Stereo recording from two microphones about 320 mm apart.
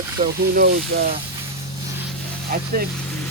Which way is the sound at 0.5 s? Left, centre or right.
Right.